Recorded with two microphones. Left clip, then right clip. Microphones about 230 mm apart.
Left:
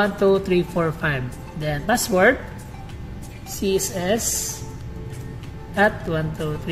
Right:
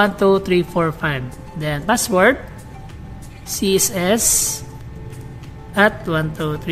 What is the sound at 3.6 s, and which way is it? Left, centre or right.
Speech, right.